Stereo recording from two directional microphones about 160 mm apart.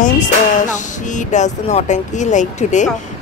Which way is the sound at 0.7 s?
50° left (ahead or behind).